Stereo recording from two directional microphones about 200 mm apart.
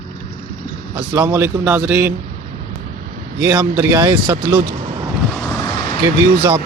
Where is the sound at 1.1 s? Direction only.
10° right (ahead or behind).